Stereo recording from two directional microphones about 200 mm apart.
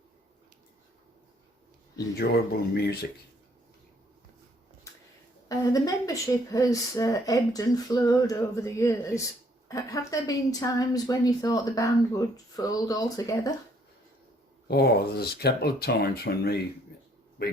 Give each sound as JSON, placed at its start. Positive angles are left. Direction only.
{"t": 2.1, "sound": "speech", "side_deg": 50}
{"t": 5.5, "sound": "a woman's voice", "side_deg": 15}
{"t": 14.7, "sound": "a man's voice", "side_deg": 55}